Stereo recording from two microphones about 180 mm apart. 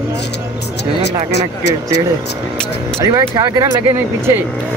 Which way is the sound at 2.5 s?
5° left (ahead or behind).